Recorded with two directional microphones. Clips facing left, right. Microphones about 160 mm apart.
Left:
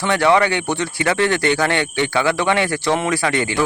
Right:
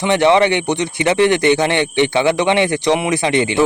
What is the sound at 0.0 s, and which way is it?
Speech, 20° right (ahead or behind).